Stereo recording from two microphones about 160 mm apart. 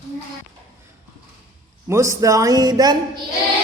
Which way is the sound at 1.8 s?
20° right (ahead or behind).